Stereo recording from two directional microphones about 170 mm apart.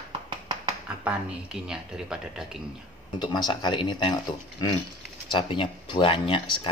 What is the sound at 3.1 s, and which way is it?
Speech, 25° left (ahead or behind).